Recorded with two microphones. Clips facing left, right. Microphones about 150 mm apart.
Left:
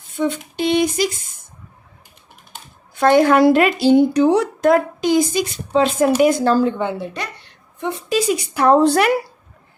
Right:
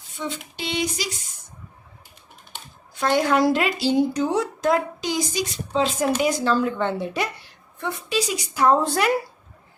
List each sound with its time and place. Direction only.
0.1 s a sound: 55° left (ahead or behind)
2.9 s speech: 55° left (ahead or behind)
6.2 s a sound: 50° left (ahead or behind)
6.9 s speech: 5° right (ahead or behind)
7.8 s a woman's voice: 20° left (ahead or behind)
8.1 s a woman's voice: 55° left (ahead or behind)